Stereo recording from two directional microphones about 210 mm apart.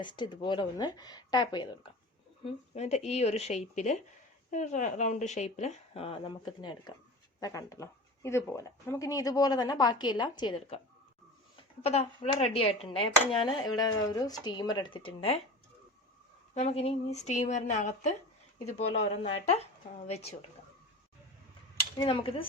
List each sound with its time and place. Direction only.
0.0 s speech: 20° left (ahead or behind)
16.6 s speech: 30° left (ahead or behind)
21.9 s speech: 20° left (ahead or behind)